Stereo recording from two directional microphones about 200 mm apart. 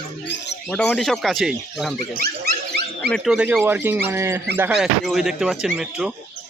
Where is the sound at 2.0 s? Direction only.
50° right (ahead or behind).